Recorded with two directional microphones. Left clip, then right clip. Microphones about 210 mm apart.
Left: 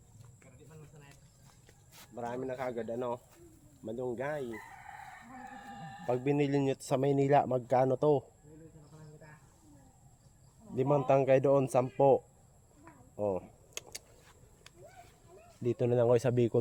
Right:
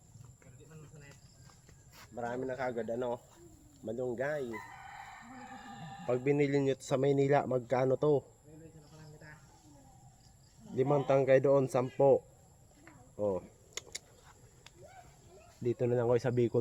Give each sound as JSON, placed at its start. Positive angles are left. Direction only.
{"t": 1.9, "sound": "speech", "side_deg": 15}
{"t": 6.1, "sound": "a man's voice", "side_deg": 30}
{"t": 10.8, "sound": "a man's voice", "side_deg": 35}
{"t": 13.1, "sound": "typing", "side_deg": 35}
{"t": 15.6, "sound": "speech", "side_deg": 35}